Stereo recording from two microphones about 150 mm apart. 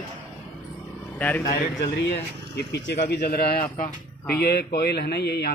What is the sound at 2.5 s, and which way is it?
A man's voice, 90° left.